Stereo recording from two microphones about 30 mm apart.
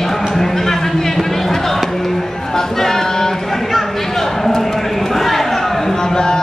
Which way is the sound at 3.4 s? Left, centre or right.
Centre.